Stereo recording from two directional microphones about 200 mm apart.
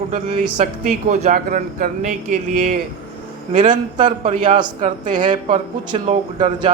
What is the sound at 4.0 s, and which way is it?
A man's voice, 40° right (ahead or behind).